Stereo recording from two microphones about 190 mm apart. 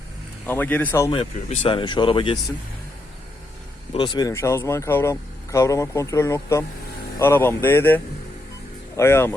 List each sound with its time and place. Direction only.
0.4 s speech: 10° left (ahead or behind)
1.1 s speech: 30° left (ahead or behind)
3.9 s speech: 25° left (ahead or behind)